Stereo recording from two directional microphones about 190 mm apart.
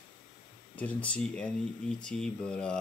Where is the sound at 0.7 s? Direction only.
5° left (ahead or behind).